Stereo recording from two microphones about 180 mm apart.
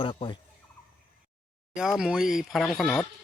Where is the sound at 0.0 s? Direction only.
30° left (ahead or behind).